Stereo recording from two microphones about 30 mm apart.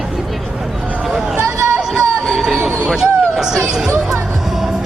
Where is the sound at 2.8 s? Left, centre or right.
Centre.